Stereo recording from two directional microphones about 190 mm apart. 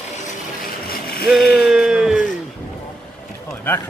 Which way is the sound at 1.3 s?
Centre (ahead or behind).